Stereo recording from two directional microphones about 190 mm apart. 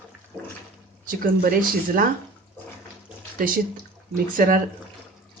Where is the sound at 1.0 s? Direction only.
45° right (ahead or behind).